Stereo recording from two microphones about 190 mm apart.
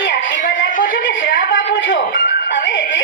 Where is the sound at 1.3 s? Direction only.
75° left (ahead or behind).